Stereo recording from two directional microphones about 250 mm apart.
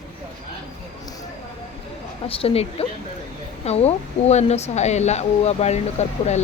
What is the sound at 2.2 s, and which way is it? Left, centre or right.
Speech, left.